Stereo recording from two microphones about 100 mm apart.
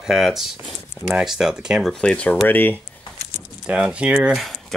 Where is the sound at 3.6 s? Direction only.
10° right (ahead or behind).